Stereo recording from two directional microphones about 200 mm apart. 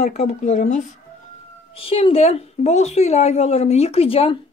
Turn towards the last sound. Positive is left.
turn(degrees=30)  # may be behind; listen again after turning